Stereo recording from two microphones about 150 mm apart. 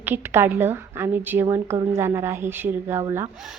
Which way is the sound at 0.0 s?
15° right (ahead or behind).